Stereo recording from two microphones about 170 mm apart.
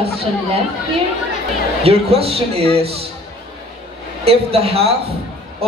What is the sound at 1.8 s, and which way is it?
A man's voice, 35° right (ahead or behind).